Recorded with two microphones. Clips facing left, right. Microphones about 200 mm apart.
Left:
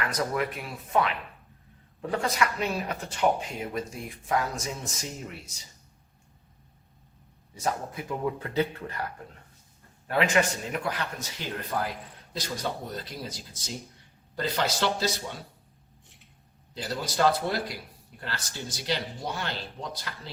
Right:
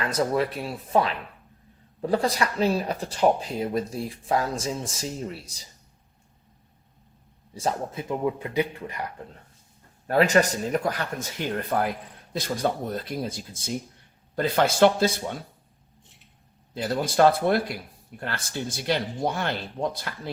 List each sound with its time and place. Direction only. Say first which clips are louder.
0.0 s speech: right 5 dB; 30° right (ahead or behind)
7.5 s speech: right 3 dB; 30° right (ahead or behind)
10.1 s speech: right 5 dB; 40° right (ahead or behind)
16.7 s speech: right 6 dB; 55° right (ahead or behind)